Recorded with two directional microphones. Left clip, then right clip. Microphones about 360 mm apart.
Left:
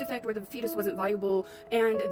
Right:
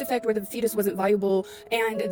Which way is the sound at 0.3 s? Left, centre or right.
Right.